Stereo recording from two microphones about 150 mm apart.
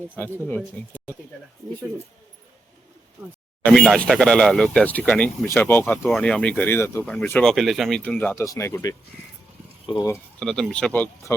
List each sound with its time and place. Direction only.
0.4 s speech: 10° left (ahead or behind)
3.7 s speech: 5° left (ahead or behind); by 10.1 s 30° left (ahead or behind)
10.4 s speech: 5° left (ahead or behind)